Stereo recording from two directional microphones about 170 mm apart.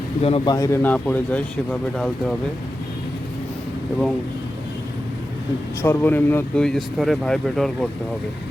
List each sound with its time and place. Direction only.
0.2 s a man's voice: 35° left (ahead or behind)
0.5 s speech: 20° left (ahead or behind)
5.8 s speech: 15° left (ahead or behind)